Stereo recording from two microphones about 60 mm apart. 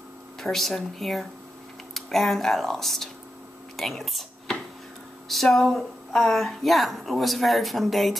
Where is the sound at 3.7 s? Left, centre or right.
Centre.